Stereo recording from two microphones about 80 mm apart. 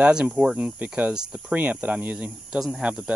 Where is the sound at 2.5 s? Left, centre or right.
Centre.